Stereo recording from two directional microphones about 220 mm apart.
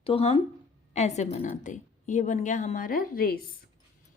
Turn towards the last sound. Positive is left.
turn(degrees=40)  # may be behind; listen again after turning